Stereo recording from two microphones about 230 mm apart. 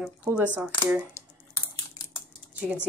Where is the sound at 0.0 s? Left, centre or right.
Centre.